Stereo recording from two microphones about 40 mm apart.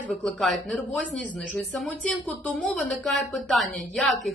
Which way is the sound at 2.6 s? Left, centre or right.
Centre.